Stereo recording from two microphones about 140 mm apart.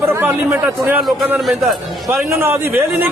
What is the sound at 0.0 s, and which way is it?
Speech, 15° right (ahead or behind).